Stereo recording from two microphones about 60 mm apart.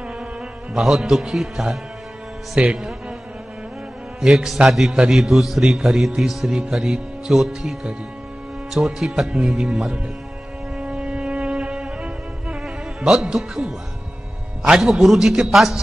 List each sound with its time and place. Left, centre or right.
0.7 s speech: centre
4.2 s a man's voice: centre
8.7 s speech: centre
10.8 s music: centre
13.1 s speech: centre